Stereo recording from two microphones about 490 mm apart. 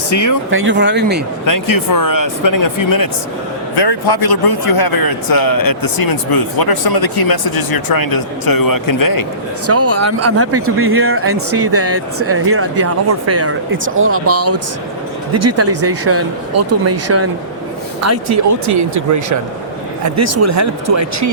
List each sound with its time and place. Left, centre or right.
0.1 s speech: left
0.5 s speech: right
1.5 s speech: left
3.8 s a man's voice: left
9.6 s speech: right